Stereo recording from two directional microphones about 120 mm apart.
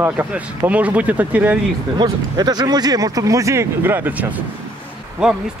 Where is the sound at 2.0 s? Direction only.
35° right (ahead or behind); by 4.1 s 15° right (ahead or behind).